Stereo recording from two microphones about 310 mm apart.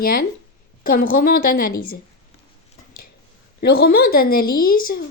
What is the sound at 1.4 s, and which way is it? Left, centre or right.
Speech, left.